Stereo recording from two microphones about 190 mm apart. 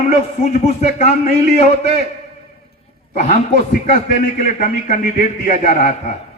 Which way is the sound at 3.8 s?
45° left (ahead or behind).